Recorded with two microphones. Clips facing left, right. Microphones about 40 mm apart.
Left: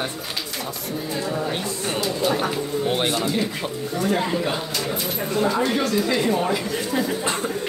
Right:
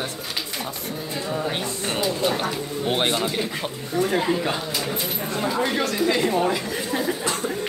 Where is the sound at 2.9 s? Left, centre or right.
Right.